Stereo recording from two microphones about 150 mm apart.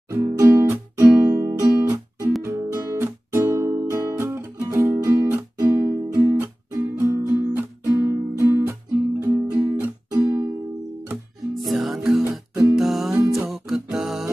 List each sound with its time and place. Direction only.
0.1 s music: 20° right (ahead or behind)
11.5 s music: centre (ahead or behind)
12.3 s music: 20° right (ahead or behind)
12.7 s music: centre (ahead or behind)